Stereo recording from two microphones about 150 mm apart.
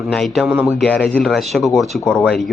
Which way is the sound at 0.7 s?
5° left (ahead or behind).